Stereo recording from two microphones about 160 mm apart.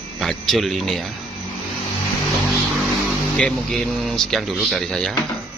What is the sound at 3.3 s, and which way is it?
Speech, 5° left (ahead or behind).